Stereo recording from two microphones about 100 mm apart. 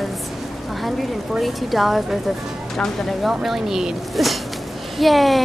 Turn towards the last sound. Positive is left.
turn(degrees=0)  # may be behind; listen again after turning